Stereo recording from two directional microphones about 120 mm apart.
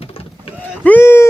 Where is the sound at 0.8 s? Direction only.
15° left (ahead or behind).